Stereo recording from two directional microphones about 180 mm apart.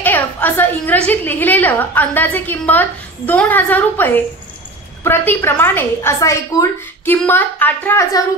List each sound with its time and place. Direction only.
0.0 s a woman's voice: 10° left (ahead or behind)